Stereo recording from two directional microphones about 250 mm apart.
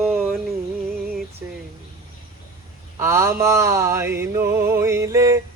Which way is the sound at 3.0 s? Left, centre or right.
Centre.